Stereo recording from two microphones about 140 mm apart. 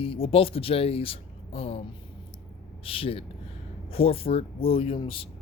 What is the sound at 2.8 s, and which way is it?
Speech, 40° left (ahead or behind).